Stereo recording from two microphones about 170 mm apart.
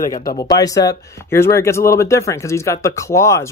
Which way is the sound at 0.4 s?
20° left (ahead or behind).